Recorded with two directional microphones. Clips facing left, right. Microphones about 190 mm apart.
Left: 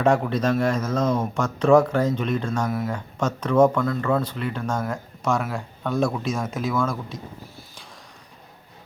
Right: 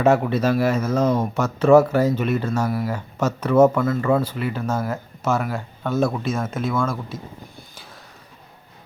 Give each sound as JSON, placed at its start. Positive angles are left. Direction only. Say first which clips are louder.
{"t": 0.0, "sound": "speech", "louder": "right 3 dB", "side_deg": -5}